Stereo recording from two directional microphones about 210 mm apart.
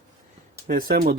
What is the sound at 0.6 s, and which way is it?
Speech, 40° right (ahead or behind).